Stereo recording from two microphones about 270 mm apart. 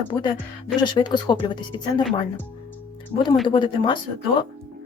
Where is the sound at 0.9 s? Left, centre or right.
Centre.